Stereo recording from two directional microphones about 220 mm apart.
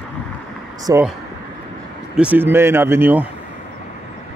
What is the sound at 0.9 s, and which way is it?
Speech, 15° right (ahead or behind).